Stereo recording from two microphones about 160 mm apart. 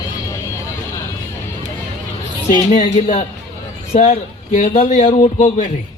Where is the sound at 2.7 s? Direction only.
45° left (ahead or behind).